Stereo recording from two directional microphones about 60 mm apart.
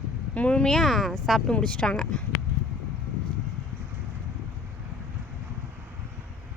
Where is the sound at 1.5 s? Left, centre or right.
Centre.